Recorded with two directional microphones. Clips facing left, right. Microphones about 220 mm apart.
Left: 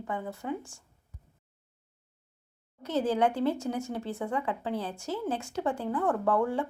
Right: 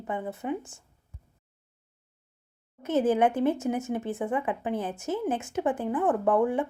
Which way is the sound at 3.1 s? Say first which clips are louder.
Right 1 dB; 20° right (ahead or behind).